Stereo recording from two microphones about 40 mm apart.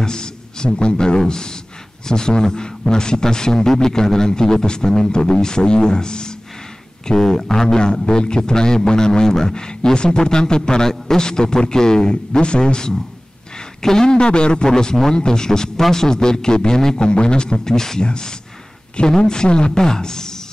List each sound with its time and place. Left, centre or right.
0.0 s a man's voice: centre